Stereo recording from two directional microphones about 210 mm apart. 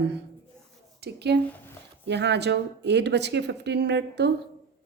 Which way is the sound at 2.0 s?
55° right (ahead or behind).